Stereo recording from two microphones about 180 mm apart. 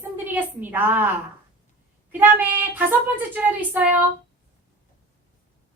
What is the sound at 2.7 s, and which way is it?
A woman's voice, 10° right (ahead or behind).